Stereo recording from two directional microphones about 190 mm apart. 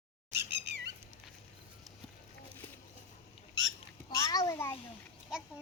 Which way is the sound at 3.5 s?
90° right.